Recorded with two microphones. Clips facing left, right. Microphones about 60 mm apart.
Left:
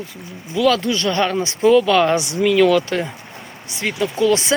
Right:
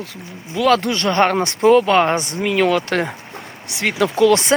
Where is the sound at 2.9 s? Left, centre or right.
Right.